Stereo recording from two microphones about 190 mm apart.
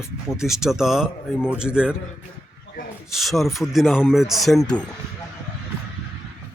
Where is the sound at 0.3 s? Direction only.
Centre (ahead or behind).